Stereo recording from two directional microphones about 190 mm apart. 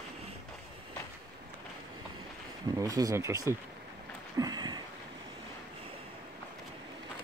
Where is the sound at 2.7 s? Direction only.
15° right (ahead or behind).